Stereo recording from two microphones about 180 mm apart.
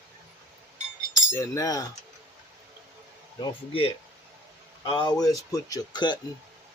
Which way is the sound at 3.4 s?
30° left (ahead or behind).